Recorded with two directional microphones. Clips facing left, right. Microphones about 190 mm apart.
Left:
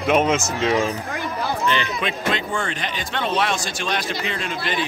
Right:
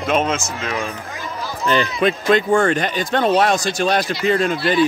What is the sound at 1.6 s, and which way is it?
Speech, 40° right (ahead or behind).